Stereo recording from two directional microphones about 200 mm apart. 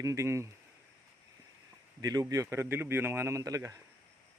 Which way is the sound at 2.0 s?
20° right (ahead or behind).